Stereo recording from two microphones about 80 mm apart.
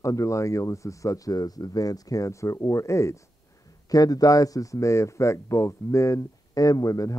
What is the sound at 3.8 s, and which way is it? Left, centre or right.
Speech, left.